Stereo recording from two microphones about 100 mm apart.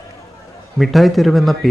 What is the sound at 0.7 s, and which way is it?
Speech, centre (ahead or behind).